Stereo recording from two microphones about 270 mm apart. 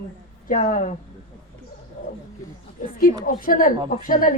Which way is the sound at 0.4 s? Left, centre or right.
Left.